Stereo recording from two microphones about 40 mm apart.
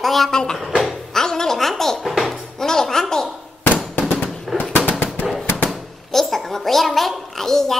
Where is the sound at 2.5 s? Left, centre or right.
Centre.